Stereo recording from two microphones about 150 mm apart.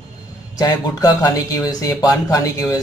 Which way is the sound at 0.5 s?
25° left (ahead or behind).